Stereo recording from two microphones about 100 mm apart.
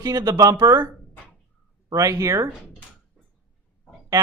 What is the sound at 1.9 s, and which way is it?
Speech, 35° right (ahead or behind).